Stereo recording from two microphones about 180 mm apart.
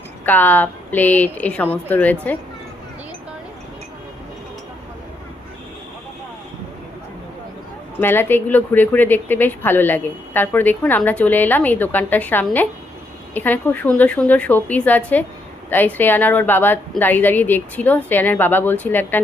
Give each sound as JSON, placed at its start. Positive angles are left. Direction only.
{"t": 0.3, "sound": "a woman's voice", "side_deg": 10}
{"t": 8.0, "sound": "a woman's voice", "side_deg": 10}